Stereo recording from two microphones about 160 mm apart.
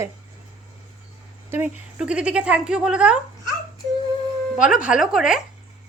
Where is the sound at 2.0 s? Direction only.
5° right (ahead or behind).